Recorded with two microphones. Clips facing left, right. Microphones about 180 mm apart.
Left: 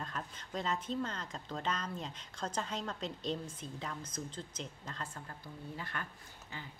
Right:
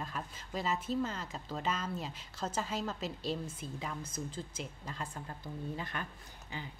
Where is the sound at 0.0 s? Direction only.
5° right (ahead or behind).